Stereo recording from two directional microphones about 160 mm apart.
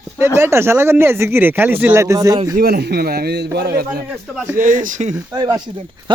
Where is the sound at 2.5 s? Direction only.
75° right (ahead or behind).